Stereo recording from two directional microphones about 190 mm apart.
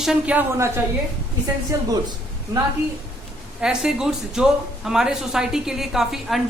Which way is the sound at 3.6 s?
5° right (ahead or behind).